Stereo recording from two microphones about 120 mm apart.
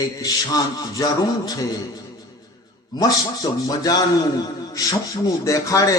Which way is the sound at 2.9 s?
30° left (ahead or behind).